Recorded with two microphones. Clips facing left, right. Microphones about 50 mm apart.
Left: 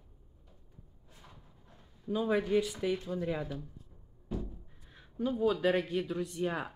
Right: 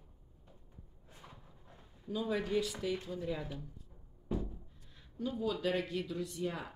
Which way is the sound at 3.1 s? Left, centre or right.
Left.